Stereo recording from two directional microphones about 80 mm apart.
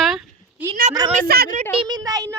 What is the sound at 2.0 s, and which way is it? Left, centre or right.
Speech, right.